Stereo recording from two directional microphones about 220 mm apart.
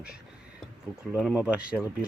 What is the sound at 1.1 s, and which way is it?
Speech, 5° right (ahead or behind).